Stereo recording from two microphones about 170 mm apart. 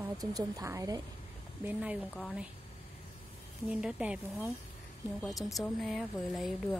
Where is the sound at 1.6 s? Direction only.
10° right (ahead or behind).